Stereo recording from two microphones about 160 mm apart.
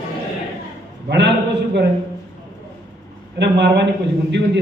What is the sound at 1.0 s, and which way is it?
Speech, 90° right.